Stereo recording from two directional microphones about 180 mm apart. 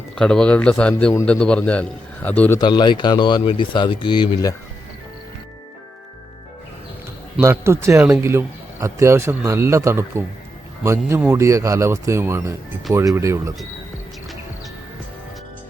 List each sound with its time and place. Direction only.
0.2 s a man's voice: 5° left (ahead or behind)
2.6 s speech: 25° left (ahead or behind)
7.3 s speech: 15° right (ahead or behind)